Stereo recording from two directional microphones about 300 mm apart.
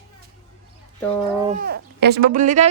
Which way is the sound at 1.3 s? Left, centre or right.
Right.